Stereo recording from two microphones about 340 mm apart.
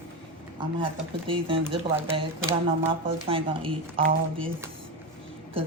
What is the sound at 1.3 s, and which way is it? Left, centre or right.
Speech, centre.